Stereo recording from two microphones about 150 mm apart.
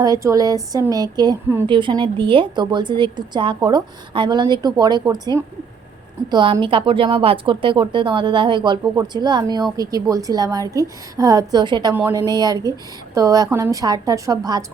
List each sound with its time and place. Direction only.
0.0 s a woman's voice: 20° right (ahead or behind)
11.9 s a woman's voice: 15° right (ahead or behind)
12.3 s a woman's voice: 25° right (ahead or behind)